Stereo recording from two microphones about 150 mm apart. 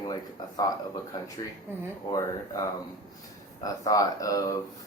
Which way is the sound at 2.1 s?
25° left (ahead or behind).